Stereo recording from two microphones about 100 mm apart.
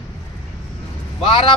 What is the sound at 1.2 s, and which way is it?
Speech, 65° left (ahead or behind).